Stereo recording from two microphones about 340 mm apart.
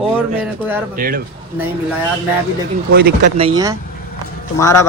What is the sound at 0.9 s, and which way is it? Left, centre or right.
Speech, right.